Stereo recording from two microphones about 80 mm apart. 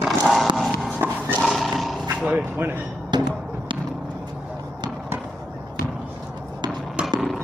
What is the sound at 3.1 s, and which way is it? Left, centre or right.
Music, right.